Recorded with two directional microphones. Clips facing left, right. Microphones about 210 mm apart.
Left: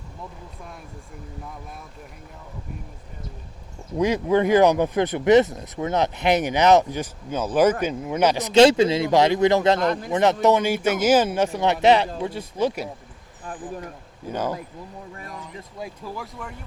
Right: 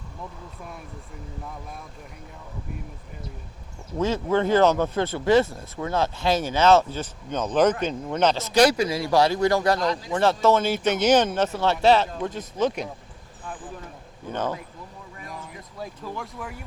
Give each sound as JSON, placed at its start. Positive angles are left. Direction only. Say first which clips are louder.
{"t": 3.9, "sound": "speech", "louder": "left 3 dB", "side_deg": 15}
{"t": 9.8, "sound": "speech", "louder": "left 3 dB", "side_deg": 55}
{"t": 10.1, "sound": "speech", "louder": "left 1 dB", "side_deg": 20}
{"t": 14.3, "sound": "speech", "louder": "left 1 dB", "side_deg": 10}
{"t": 15.8, "sound": "speech", "louder": "even", "side_deg": 5}